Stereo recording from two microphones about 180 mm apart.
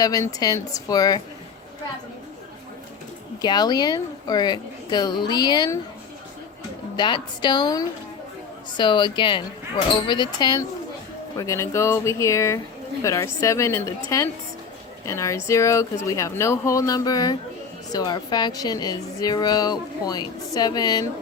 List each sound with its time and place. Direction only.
0.0 s a woman's voice: 20° left (ahead or behind)
3.4 s a woman's voice: 25° left (ahead or behind)
6.9 s a woman's voice: 25° left (ahead or behind)